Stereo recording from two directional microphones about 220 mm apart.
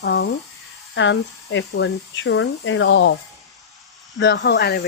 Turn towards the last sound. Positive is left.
turn(degrees=50)  # may be behind; listen again after turning